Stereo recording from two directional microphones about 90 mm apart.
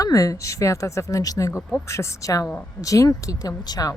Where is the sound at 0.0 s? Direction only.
40° left (ahead or behind).